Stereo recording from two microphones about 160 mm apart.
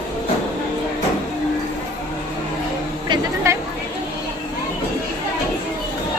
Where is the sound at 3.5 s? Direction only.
15° right (ahead or behind).